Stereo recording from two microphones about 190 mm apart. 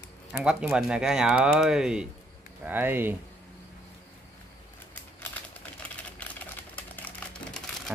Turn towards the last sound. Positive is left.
turn(degrees=5)  # may be behind; listen again after turning